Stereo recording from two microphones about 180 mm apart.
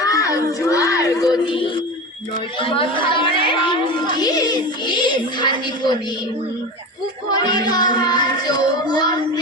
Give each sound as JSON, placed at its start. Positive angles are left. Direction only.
{"t": 0.0, "sound": "music", "side_deg": 20}
{"t": 2.6, "sound": "speech", "side_deg": 30}
{"t": 7.4, "sound": "speech", "side_deg": 25}